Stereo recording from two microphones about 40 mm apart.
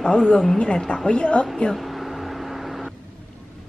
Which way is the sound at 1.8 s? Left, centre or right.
Centre.